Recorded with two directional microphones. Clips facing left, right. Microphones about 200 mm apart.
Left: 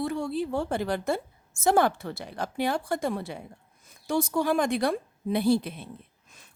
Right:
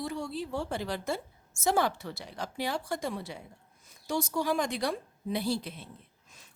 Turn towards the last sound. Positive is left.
turn(degrees=55)  # may be behind; listen again after turning